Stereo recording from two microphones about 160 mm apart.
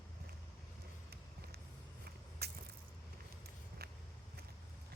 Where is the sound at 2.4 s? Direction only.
85° right.